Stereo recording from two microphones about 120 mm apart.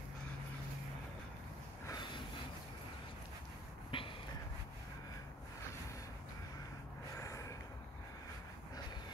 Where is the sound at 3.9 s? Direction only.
45° left (ahead or behind).